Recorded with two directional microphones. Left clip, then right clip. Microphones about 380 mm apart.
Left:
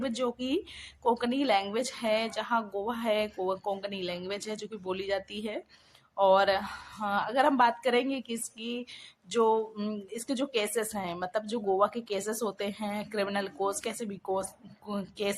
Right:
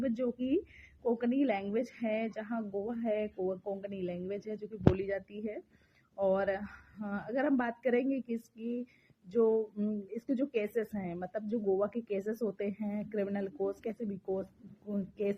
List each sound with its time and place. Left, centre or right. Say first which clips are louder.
0.0 s a woman's voice: left 3 dB; right